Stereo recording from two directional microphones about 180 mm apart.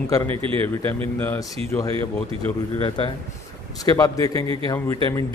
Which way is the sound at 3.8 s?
20° left (ahead or behind).